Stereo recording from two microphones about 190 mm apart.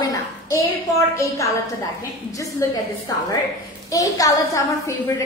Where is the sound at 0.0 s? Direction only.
20° left (ahead or behind).